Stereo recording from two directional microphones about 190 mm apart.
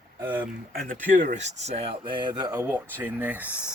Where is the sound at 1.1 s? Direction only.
40° right (ahead or behind); by 2.5 s 25° right (ahead or behind).